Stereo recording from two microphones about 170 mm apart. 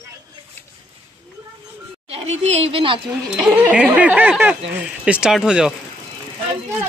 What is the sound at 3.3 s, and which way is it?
Speech, 10° right (ahead or behind).